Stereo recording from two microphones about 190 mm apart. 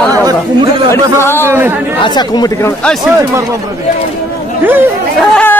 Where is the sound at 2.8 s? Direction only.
Centre (ahead or behind).